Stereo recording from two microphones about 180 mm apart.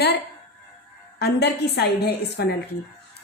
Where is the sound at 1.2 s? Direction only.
65° left (ahead or behind).